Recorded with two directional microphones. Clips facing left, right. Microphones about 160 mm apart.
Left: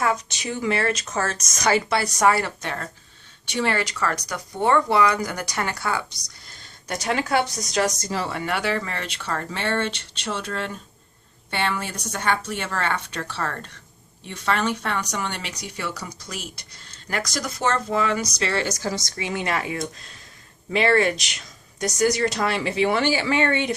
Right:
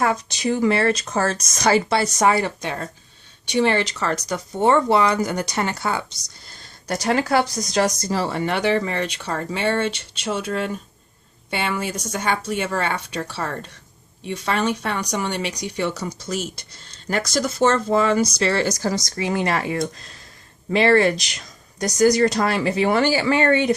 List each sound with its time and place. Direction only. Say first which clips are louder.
0.0 s speech: right 3 dB; 35° right (ahead or behind)
6.5 s speech: right 4 dB; 35° right (ahead or behind)